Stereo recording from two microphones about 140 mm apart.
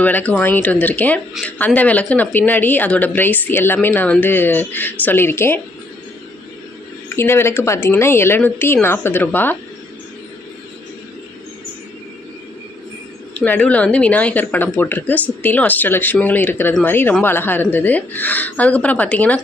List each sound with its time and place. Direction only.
0.0 s a woman's voice: 10° left (ahead or behind)
7.2 s a woman's voice: 15° left (ahead or behind)
13.3 s a woman's voice: 10° left (ahead or behind)